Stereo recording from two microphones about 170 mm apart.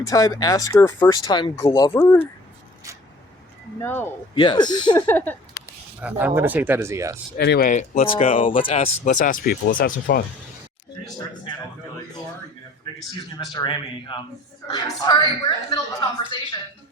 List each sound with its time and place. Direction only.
0.0 s speech: 20° left (ahead or behind)
3.8 s speech: 15° left (ahead or behind)
4.4 s speech: 25° left (ahead or behind)
4.9 s speech: 10° left (ahead or behind)
6.0 s speech: 10° right (ahead or behind)
7.3 s speech: 75° left (ahead or behind)
7.7 s speech: 40° left (ahead or behind); by 10.2 s 60° left (ahead or behind)
13.4 s speech: 25° left (ahead or behind)